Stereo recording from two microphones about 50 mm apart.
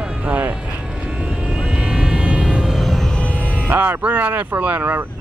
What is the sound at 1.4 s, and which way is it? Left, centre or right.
Vehicle, right.